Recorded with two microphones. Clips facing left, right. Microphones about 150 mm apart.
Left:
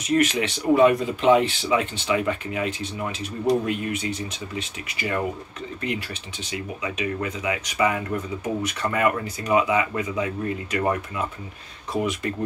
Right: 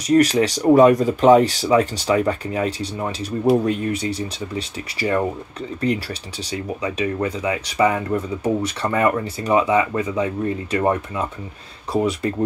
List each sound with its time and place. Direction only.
0.0 s speech: 35° right (ahead or behind)